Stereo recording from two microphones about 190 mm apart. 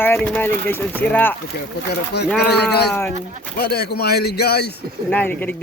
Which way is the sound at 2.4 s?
60° left (ahead or behind).